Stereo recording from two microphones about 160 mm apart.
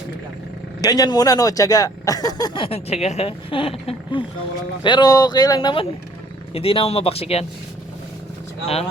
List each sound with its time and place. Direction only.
0.8 s speech: 25° left (ahead or behind)